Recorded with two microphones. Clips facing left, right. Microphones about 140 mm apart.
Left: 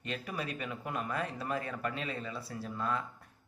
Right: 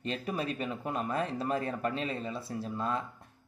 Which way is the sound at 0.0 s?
30° right (ahead or behind).